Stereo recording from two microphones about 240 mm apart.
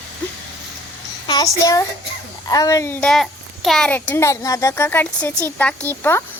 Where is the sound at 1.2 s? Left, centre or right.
Centre.